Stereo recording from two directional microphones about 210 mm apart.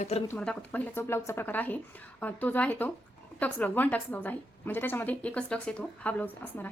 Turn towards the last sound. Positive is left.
turn(degrees=5)  # may be behind; listen again after turning